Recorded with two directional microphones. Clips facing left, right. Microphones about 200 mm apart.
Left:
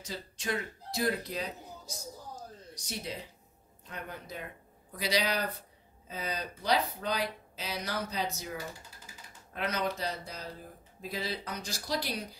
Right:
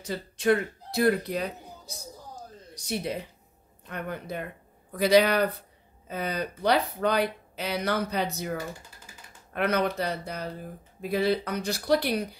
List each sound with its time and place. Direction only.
0.0 s speech: 60° right (ahead or behind)
2.7 s speech: 60° right (ahead or behind)